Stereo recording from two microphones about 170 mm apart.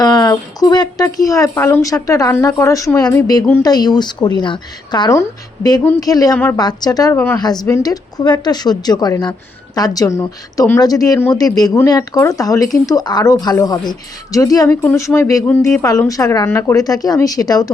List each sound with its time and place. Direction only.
0.0 s a woman's voice: 25° left (ahead or behind)
6.6 s speech: 25° left (ahead or behind)